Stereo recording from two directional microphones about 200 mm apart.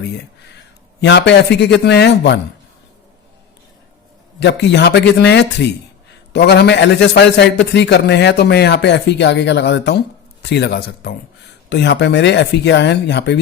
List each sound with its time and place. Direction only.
1.0 s a man's voice: 60° left (ahead or behind)
4.4 s a man's voice: 60° left (ahead or behind)